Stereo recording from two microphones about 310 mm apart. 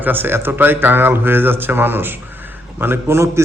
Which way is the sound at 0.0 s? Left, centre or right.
Centre.